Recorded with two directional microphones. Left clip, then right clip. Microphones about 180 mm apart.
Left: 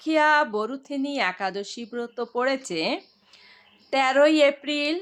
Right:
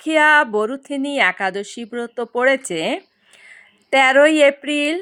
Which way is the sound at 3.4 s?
35° right (ahead or behind).